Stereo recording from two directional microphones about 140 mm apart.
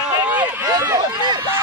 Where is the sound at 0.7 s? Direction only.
30° right (ahead or behind).